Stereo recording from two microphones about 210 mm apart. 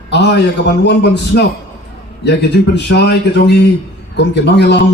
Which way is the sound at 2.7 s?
50° left (ahead or behind).